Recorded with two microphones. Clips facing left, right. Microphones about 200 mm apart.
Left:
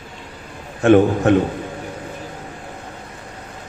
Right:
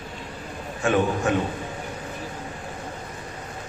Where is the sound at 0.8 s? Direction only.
55° left (ahead or behind).